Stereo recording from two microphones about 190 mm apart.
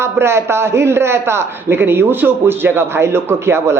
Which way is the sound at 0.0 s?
15° right (ahead or behind).